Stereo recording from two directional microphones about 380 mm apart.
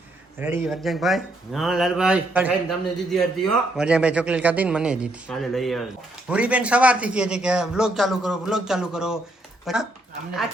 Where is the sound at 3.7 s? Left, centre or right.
Centre.